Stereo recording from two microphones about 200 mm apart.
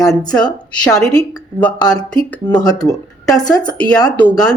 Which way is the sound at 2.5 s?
20° left (ahead or behind).